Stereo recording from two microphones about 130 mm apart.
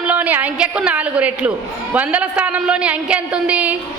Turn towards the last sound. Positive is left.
turn(degrees=-10)  # may be behind; listen again after turning